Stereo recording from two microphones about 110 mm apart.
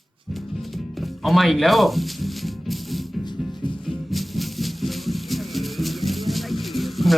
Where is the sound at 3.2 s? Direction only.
45° left (ahead or behind).